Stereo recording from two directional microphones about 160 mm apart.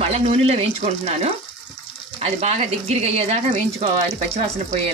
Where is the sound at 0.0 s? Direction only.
40° right (ahead or behind).